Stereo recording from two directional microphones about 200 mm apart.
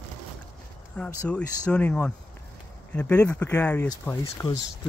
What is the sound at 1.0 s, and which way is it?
Speech, 5° left (ahead or behind).